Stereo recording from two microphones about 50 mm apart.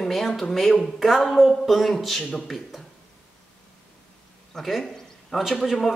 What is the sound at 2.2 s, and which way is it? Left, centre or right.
Speech, left.